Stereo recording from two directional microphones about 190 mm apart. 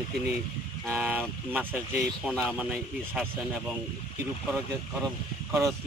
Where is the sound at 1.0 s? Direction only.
10° right (ahead or behind).